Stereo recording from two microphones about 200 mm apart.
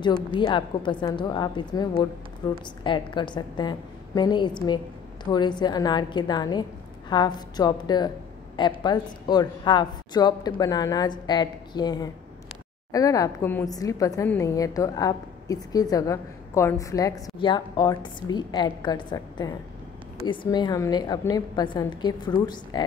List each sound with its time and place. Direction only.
0.4 s a woman's voice: 25° left (ahead or behind)